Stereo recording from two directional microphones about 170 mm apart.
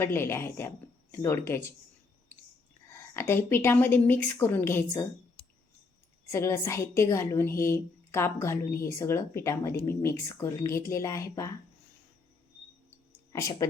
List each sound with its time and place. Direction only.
0.0 s a woman's voice: 15° left (ahead or behind)
2.9 s a woman's voice: 15° left (ahead or behind)
6.3 s a woman's voice: 15° left (ahead or behind)
13.6 s speech: 20° left (ahead or behind)